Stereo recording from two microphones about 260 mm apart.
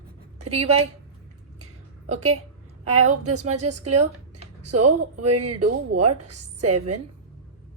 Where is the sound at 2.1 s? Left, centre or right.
Right.